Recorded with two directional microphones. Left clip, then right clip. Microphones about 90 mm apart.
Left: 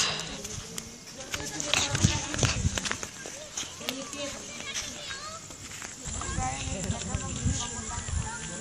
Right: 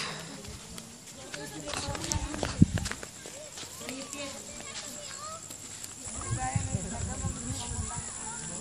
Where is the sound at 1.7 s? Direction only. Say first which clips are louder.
Left 11 dB; 20° left (ahead or behind).